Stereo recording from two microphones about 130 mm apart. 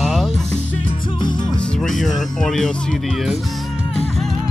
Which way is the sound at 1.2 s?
35° left (ahead or behind).